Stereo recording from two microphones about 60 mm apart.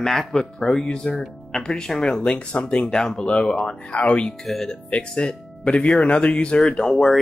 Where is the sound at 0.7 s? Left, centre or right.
Centre.